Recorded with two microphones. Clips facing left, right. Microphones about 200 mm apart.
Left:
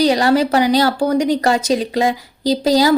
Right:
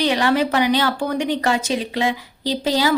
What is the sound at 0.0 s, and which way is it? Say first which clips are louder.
A woman's voice: left 4 dB; 40° left (ahead or behind).